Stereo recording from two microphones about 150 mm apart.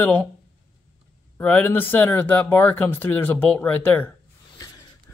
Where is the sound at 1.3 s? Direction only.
15° left (ahead or behind).